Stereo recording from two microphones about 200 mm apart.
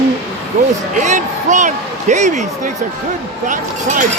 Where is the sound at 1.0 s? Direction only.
40° right (ahead or behind).